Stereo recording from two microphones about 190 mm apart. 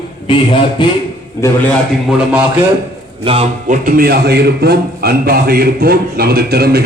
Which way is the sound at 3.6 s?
45° right (ahead or behind).